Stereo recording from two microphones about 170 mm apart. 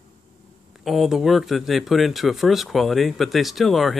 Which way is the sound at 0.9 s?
Centre (ahead or behind).